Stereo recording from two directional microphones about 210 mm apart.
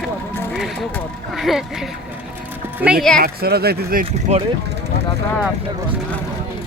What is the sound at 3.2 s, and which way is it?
Speech, 50° right (ahead or behind).